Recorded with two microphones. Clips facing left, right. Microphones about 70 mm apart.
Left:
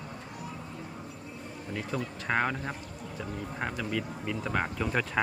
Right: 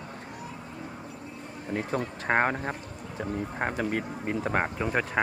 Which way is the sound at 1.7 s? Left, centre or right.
Right.